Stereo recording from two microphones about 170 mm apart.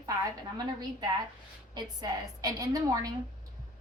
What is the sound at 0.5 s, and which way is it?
A woman's voice, 25° right (ahead or behind).